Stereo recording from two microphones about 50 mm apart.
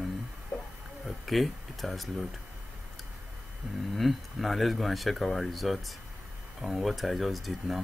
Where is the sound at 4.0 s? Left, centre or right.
Centre.